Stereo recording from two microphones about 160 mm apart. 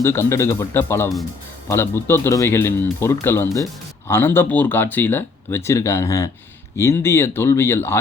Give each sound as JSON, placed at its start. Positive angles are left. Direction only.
{"t": 0.0, "sound": "speech", "side_deg": 15}